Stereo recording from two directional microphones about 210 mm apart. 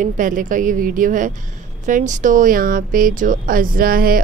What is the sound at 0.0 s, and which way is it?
A woman's voice, 40° right (ahead or behind).